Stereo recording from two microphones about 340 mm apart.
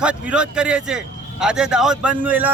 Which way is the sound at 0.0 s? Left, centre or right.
Centre.